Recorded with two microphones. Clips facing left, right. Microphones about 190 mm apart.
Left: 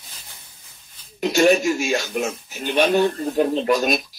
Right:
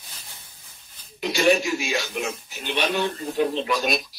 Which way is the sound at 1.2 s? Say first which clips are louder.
Left 4 dB; 45° left (ahead or behind).